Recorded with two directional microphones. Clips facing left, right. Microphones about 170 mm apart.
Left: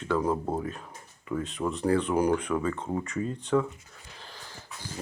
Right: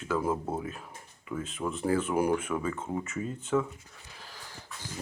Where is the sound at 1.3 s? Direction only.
Centre (ahead or behind).